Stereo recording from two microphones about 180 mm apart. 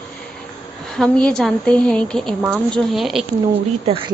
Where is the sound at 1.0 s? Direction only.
5° left (ahead or behind).